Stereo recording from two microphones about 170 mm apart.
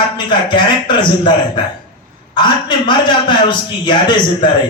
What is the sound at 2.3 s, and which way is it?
A man's voice, 25° left (ahead or behind).